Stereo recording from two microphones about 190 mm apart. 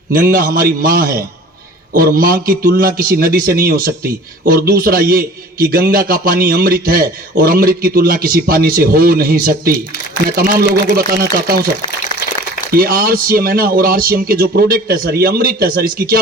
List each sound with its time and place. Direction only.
0.1 s a man's voice: 50° right (ahead or behind)
12.1 s a sound: 25° left (ahead or behind)
12.7 s a man's voice: 50° right (ahead or behind)